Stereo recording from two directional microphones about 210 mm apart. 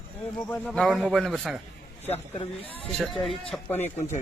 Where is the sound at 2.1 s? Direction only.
25° left (ahead or behind).